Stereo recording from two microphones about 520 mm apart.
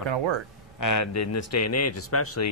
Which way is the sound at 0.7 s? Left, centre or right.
Left.